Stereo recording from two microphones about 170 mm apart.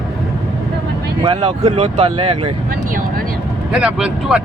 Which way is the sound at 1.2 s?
35° right (ahead or behind).